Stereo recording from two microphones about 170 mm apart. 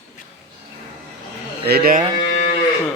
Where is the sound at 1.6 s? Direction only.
65° right (ahead or behind).